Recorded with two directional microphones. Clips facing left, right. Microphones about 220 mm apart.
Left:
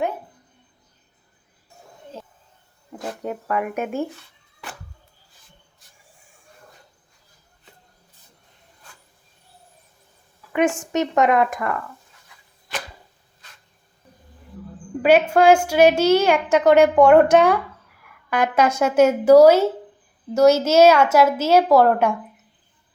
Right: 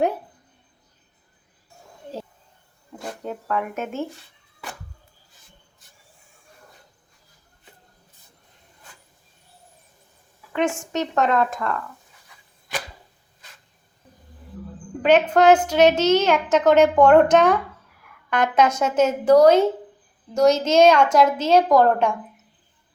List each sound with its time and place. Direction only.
3.2 s a child's voice: 10° left (ahead or behind)
10.9 s a child's voice: 15° left (ahead or behind)
15.3 s a child's voice: 10° left (ahead or behind)